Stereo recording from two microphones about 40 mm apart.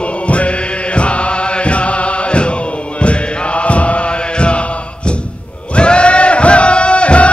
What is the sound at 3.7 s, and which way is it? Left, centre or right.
Chant, left.